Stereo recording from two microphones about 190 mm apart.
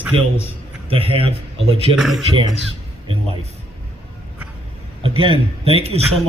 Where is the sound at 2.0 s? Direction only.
Centre (ahead or behind).